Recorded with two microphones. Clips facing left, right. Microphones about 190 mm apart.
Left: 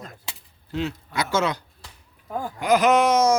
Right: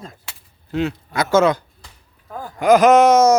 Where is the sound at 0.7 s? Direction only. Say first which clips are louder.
Right 5 dB; 50° right (ahead or behind).